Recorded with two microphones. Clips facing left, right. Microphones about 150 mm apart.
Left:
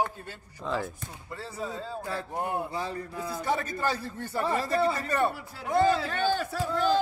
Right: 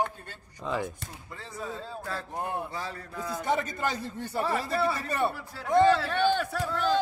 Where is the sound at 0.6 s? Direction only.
5° right (ahead or behind).